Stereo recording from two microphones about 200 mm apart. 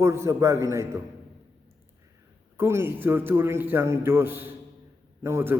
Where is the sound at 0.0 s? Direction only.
15° right (ahead or behind).